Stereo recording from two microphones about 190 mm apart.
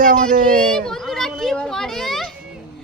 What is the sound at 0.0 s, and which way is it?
Speech, 45° right (ahead or behind).